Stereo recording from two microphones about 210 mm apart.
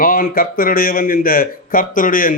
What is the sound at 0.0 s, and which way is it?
A man's voice, 40° left (ahead or behind).